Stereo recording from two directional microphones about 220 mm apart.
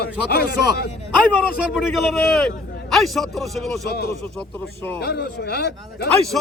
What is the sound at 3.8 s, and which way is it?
Speech, 45° left (ahead or behind).